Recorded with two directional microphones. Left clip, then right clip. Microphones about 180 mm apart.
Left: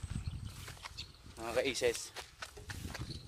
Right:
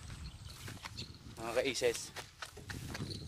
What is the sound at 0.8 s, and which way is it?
Wild animals, 15° right (ahead or behind).